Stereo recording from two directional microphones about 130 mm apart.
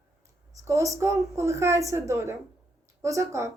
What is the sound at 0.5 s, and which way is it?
Speech, 25° right (ahead or behind).